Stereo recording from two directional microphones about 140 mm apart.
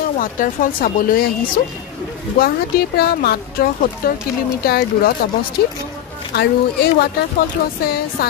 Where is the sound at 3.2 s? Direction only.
90° left.